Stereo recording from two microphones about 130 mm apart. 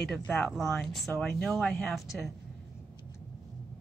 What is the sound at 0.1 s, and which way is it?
Speech, 5° left (ahead or behind).